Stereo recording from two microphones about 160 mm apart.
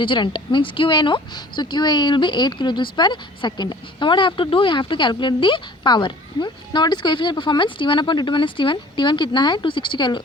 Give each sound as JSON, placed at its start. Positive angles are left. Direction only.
{"t": 0.0, "sound": "speech", "side_deg": 30}